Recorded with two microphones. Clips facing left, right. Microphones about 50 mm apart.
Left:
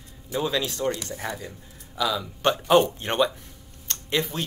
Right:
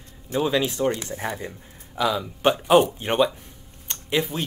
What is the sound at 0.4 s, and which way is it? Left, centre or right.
Speech, right.